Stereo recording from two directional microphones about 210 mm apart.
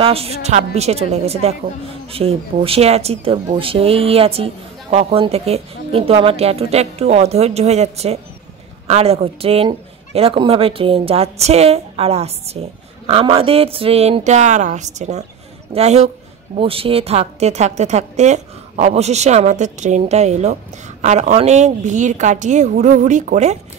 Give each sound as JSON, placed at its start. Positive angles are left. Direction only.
{"t": 0.0, "sound": "a woman's voice", "side_deg": -30}